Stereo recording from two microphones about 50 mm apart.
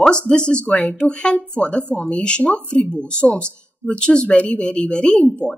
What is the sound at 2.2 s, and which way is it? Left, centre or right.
Speech, centre.